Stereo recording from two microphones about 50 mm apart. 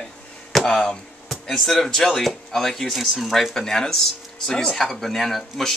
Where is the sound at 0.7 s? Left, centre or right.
Centre.